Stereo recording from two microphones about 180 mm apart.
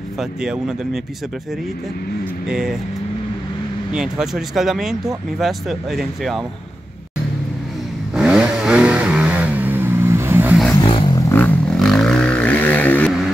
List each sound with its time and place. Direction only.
0.2 s speech: 5° right (ahead or behind)
2.5 s speech: 5° right (ahead or behind)
3.9 s speech: 5° right (ahead or behind)
8.1 s vehicle: 5° right (ahead or behind)
10.7 s a sound: 25° left (ahead or behind)
11.1 s vehicle: 15° left (ahead or behind)